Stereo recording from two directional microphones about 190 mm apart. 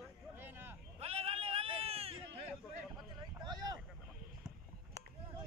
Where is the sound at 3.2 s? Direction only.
20° right (ahead or behind).